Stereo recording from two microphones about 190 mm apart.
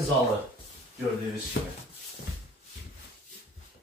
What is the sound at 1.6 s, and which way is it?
Speech, 65° left (ahead or behind).